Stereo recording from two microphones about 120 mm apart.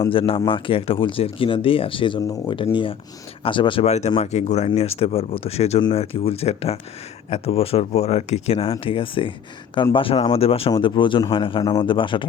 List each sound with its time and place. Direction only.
0.1 s speech: 50° left (ahead or behind)
3.8 s speech: 65° left (ahead or behind)
8.8 s speech: 50° left (ahead or behind)
10.7 s speech: 45° left (ahead or behind)